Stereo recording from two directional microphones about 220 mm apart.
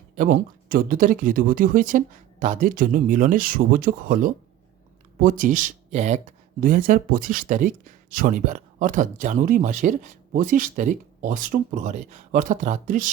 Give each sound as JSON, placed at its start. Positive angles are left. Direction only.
{"t": 0.2, "sound": "speech", "side_deg": -40}